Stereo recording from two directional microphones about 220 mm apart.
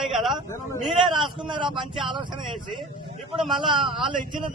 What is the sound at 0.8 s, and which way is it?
Speech, centre (ahead or behind).